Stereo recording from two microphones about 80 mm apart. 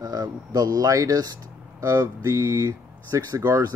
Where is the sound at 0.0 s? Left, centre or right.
Right.